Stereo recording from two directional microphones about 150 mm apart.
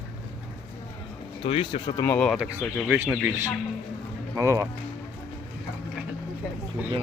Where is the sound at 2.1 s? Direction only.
10° left (ahead or behind).